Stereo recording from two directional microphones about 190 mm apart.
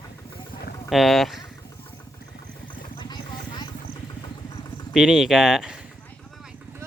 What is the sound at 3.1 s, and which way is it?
Vehicle, 20° left (ahead or behind).